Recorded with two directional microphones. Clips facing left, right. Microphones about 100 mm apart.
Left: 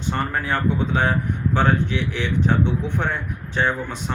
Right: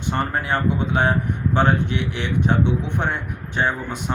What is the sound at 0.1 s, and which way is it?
Speech, 20° right (ahead or behind).